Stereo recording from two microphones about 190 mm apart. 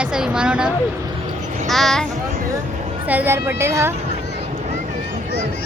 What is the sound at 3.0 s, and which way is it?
Speech, 10° right (ahead or behind).